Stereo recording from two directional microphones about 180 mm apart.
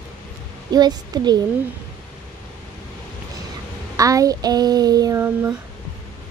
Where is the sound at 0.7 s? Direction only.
20° right (ahead or behind).